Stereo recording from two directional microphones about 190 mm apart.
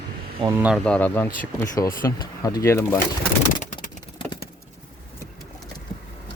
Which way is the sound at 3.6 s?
40° left (ahead or behind).